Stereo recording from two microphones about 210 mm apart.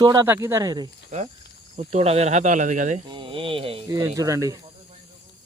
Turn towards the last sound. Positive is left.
turn(degrees=-15)  # may be behind; listen again after turning